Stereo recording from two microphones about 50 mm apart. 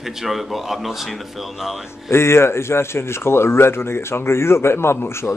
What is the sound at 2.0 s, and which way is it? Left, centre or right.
Speech, left.